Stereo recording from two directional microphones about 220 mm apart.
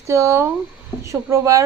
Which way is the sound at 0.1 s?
10° right (ahead or behind).